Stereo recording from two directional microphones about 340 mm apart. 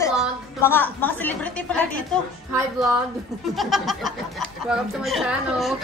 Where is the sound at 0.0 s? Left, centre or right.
Centre.